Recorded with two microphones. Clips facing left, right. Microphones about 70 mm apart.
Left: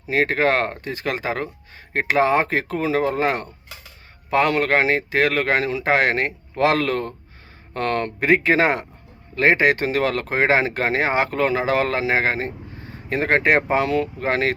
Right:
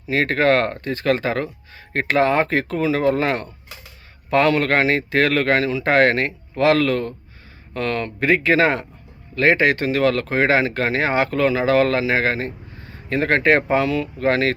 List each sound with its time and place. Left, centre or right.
0.1 s speech: centre
8.2 s speech: left